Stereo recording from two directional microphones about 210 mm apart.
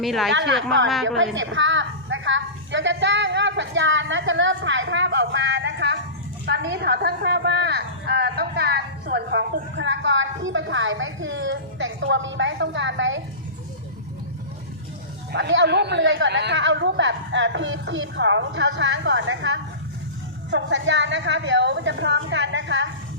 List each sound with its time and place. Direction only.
0.0 s speech: centre (ahead or behind)
0.3 s a woman's voice: 55° right (ahead or behind)
15.3 s speech: 60° right (ahead or behind)